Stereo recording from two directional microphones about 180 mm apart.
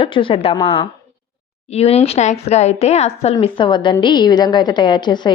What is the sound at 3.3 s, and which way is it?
A woman's voice, 25° left (ahead or behind).